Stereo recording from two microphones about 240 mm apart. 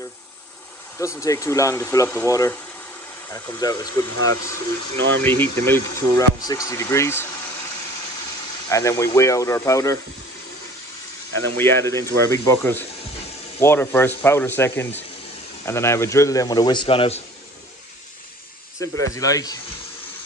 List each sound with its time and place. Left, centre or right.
0.9 s speech: centre
3.9 s speech: right
5.2 s speech: centre
8.6 s speech: centre
11.3 s speech: centre
18.8 s speech: centre